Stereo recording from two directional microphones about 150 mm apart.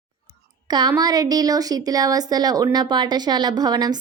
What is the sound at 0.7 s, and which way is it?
Speech, 25° right (ahead or behind).